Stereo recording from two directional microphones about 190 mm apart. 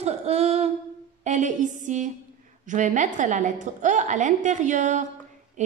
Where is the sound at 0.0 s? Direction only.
35° right (ahead or behind).